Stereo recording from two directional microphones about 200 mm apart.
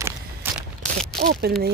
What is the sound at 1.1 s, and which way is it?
Speech, 50° right (ahead or behind).